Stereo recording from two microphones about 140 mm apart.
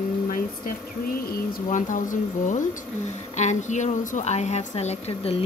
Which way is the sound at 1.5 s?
65° left (ahead or behind).